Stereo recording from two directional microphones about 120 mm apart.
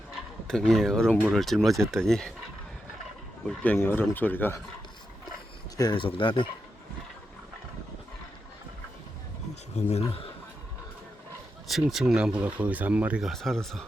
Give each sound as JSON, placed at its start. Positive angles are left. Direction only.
{"t": 0.4, "sound": "speech", "side_deg": 5}
{"t": 3.8, "sound": "speech", "side_deg": 15}
{"t": 5.7, "sound": "speech", "side_deg": 35}
{"t": 9.7, "sound": "speech", "side_deg": 60}
{"t": 11.7, "sound": "speech", "side_deg": 0}
{"t": 13.2, "sound": "speech", "side_deg": 0}